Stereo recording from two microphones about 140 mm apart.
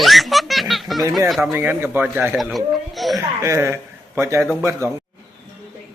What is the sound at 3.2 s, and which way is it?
A man's voice, 20° right (ahead or behind).